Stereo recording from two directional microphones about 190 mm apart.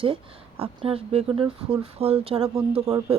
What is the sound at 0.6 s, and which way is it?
Speech, 30° right (ahead or behind).